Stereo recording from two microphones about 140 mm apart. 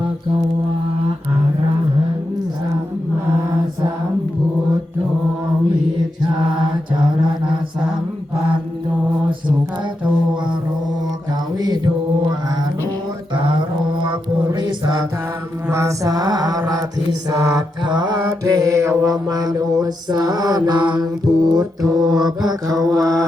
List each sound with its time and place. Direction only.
11.5 s mantra: 30° right (ahead or behind)
14.0 s music: 30° right (ahead or behind)
15.7 s mantra: 20° right (ahead or behind)